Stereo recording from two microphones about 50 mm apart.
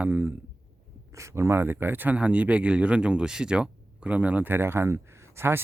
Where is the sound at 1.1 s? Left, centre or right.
Right.